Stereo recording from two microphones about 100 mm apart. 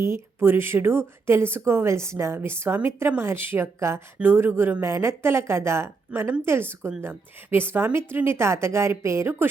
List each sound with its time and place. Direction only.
0.0 s speech: 25° right (ahead or behind)